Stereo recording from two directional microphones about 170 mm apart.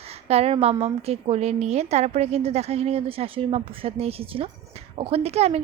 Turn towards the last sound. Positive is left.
turn(degrees=-40)  # may be behind; listen again after turning